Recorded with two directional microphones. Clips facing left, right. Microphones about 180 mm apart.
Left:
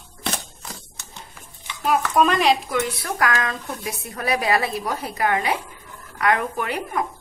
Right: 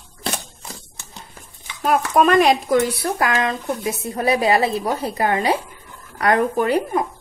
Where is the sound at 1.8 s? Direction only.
50° right (ahead or behind).